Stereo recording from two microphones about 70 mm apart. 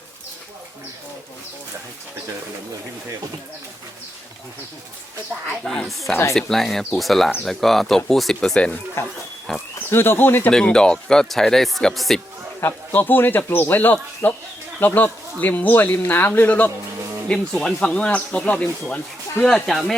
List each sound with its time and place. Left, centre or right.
5.6 s speech: centre
9.9 s speech: left
10.5 s speech: centre
12.9 s speech: left
17.2 s speech: centre
19.4 s speech: centre